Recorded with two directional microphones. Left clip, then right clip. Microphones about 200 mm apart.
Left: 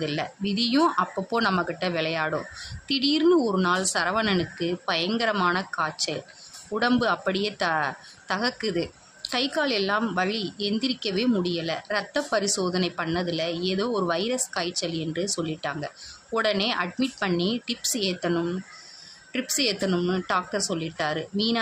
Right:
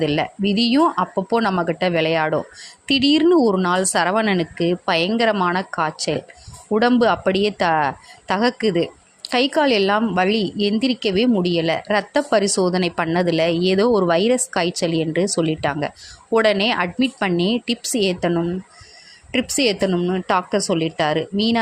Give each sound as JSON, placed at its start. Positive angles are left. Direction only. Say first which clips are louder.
{"t": 0.0, "sound": "a woman's voice", "louder": "right 9 dB", "side_deg": -30}
{"t": 19.9, "sound": "a woman's voice", "louder": "right 6 dB", "side_deg": -20}